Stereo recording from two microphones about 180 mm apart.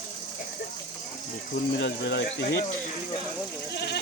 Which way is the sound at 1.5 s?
70° left (ahead or behind).